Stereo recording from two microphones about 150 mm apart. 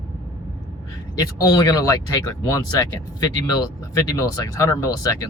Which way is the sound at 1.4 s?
25° left (ahead or behind).